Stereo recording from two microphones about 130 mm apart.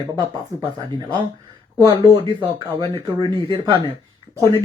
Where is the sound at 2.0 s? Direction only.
30° right (ahead or behind).